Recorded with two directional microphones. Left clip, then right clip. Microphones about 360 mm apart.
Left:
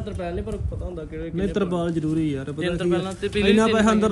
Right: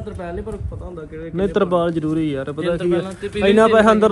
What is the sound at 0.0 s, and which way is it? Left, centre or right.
Speech, centre.